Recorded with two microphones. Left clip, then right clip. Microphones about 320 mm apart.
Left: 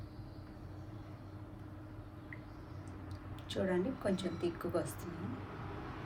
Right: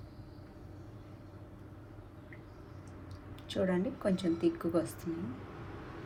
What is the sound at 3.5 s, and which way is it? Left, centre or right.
A woman's voice, centre.